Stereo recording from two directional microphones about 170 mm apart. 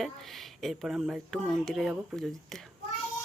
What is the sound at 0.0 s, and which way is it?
Speech, centre (ahead or behind).